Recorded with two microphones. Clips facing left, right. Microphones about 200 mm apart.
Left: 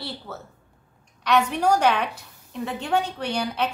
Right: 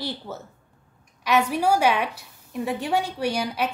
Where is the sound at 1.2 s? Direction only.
10° right (ahead or behind).